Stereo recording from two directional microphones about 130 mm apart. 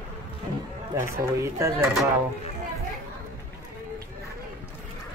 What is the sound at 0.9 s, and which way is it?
Speech, 20° right (ahead or behind).